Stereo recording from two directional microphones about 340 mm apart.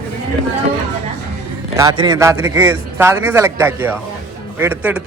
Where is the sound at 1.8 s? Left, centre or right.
Centre.